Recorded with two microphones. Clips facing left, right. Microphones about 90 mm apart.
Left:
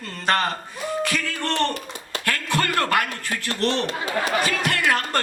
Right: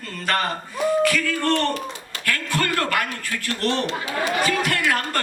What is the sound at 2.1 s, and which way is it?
A man's voice, 20° left (ahead or behind).